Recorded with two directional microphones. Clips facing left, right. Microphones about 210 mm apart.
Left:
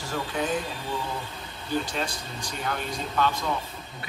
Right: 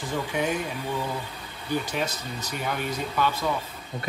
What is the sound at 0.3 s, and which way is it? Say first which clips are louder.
Speech: right 1 dB; 10° right (ahead or behind).